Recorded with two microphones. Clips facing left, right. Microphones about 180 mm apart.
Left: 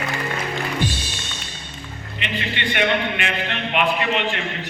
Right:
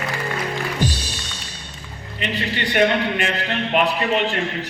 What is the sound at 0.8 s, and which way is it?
Music, 40° right (ahead or behind).